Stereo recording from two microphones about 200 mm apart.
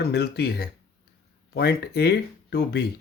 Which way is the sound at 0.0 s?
55° left (ahead or behind).